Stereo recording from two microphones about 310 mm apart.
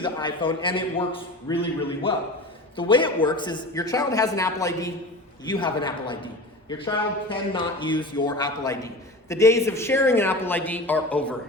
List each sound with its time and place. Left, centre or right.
0.0 s a man's voice: centre